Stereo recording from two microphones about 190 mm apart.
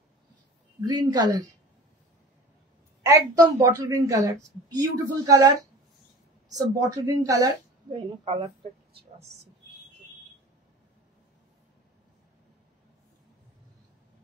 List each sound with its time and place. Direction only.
0.7 s a woman's voice: 20° right (ahead or behind)
3.1 s a woman's voice: 15° right (ahead or behind)
6.5 s a woman's voice: 20° right (ahead or behind)